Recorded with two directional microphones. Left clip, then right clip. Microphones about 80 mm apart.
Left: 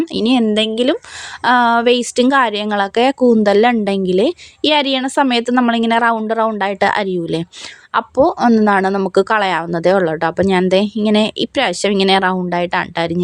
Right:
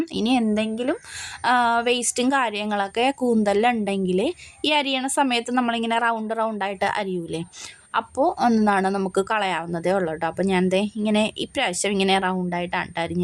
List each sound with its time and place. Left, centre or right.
0.0 s a woman's voice: left
7.9 s a woman's voice: left
8.4 s speech: centre
8.6 s a woman's voice: left